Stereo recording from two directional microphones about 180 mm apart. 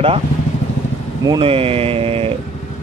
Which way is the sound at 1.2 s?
30° right (ahead or behind).